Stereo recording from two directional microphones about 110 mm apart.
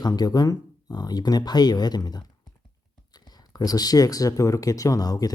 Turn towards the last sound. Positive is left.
turn(degrees=35)  # may be behind; listen again after turning